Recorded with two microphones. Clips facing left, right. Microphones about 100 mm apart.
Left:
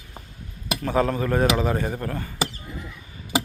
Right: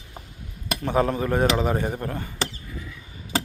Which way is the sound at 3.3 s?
10° left (ahead or behind).